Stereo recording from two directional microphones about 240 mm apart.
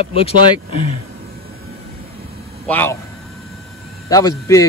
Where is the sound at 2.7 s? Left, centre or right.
Centre.